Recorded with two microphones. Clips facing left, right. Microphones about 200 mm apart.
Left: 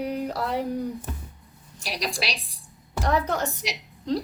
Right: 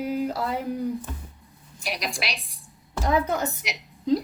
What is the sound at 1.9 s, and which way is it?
Speech, 35° left (ahead or behind).